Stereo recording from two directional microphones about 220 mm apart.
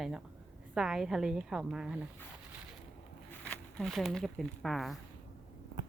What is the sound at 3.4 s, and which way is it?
Speech, 5° left (ahead or behind).